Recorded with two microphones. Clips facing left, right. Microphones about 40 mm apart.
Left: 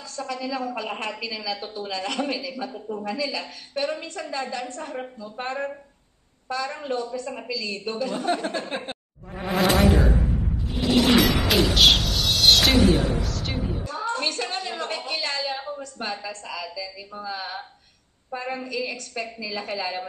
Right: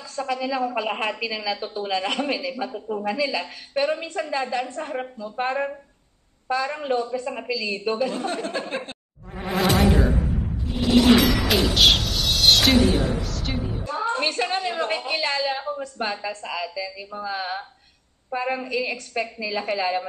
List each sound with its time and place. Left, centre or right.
0.1 s a woman's voice: right
8.3 s speech: centre
9.4 s insect: centre
10.7 s a sound: centre
13.8 s a woman's voice: right
16.6 s music: centre
18.3 s a woman's voice: centre
19.8 s music: centre